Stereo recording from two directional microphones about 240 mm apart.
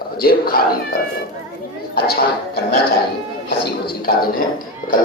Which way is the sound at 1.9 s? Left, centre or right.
Left.